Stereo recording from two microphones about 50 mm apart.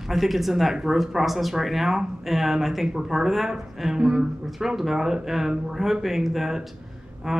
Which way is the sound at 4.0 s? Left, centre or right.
Centre.